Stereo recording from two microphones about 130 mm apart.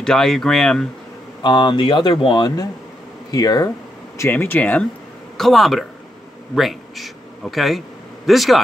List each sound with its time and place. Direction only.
0.0 s speech: 5° left (ahead or behind)
1.4 s speech: 35° left (ahead or behind)
4.2 s speech: 20° left (ahead or behind)
5.4 s a man's voice: centre (ahead or behind)